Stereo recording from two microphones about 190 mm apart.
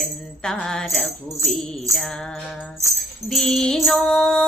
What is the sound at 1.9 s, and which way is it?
Music, 15° right (ahead or behind).